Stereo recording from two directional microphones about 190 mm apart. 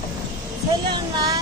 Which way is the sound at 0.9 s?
20° right (ahead or behind).